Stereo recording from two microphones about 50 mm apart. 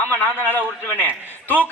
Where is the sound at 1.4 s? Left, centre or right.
Left.